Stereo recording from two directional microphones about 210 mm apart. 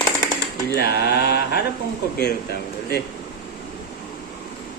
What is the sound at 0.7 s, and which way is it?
Mantra, 50° left (ahead or behind).